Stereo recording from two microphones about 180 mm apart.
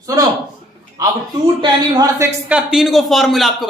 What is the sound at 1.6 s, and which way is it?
Speech, 20° right (ahead or behind).